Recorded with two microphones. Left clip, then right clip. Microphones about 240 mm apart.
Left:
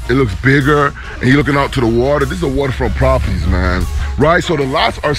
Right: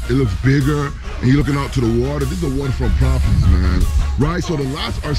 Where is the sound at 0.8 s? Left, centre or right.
Centre.